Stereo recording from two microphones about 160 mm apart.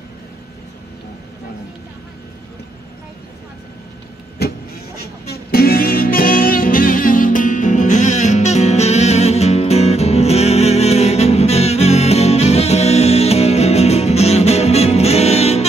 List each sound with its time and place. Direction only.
4.4 s vehicle: 85° left
5.3 s music: 70° left (ahead or behind); by 15.6 s 40° left (ahead or behind)